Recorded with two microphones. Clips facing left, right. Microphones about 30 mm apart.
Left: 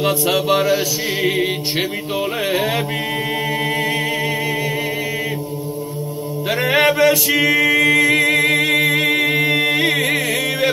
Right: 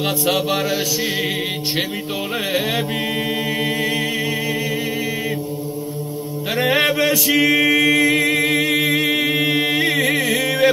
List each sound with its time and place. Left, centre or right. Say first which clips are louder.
6.7 s male singing: left 3 dB; left
7.1 s a capella: left 1 dB; left
8.9 s a capella: left 2 dB; centre
9.4 s chant: left 2 dB; centre
9.9 s music: even; left
10.3 s music: right 2 dB; centre